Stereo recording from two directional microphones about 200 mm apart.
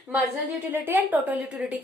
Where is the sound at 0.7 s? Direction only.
10° right (ahead or behind).